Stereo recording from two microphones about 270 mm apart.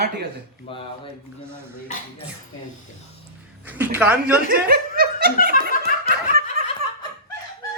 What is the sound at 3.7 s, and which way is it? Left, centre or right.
Speech, centre.